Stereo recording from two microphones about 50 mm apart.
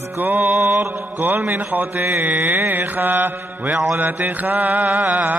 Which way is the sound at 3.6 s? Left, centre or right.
Centre.